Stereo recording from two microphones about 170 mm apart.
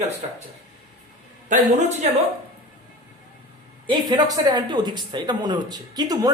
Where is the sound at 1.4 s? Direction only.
50° right (ahead or behind).